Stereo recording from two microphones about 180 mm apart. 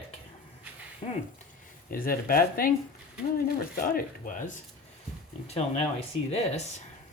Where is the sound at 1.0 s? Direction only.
30° left (ahead or behind).